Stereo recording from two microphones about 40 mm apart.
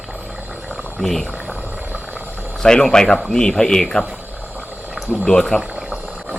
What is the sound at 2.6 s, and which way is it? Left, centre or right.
A man's voice, left.